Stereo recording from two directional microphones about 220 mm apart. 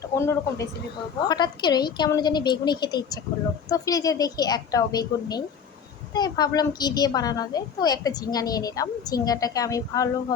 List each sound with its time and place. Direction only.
0.2 s a woman's voice: 10° left (ahead or behind)